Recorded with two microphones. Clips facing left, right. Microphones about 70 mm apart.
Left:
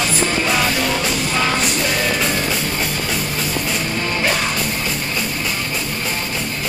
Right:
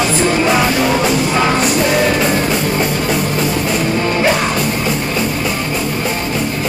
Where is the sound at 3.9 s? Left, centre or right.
Centre.